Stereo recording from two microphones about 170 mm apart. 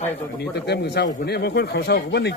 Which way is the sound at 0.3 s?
80° left.